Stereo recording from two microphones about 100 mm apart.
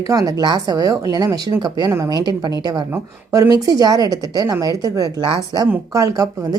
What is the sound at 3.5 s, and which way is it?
Speech, 40° right (ahead or behind).